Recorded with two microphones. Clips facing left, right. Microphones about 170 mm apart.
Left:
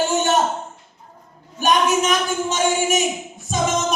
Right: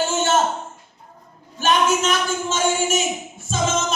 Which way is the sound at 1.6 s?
15° left (ahead or behind).